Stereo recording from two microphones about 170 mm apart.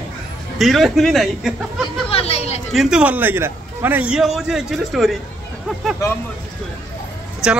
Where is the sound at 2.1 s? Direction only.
35° left (ahead or behind).